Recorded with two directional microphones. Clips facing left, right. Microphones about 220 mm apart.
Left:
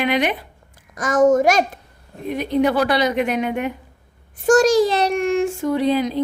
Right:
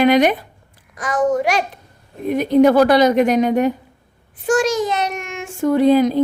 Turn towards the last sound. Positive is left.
turn(degrees=-45)  # may be behind; listen again after turning